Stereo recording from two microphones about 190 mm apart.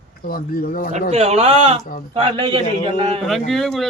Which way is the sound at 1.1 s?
35° right (ahead or behind).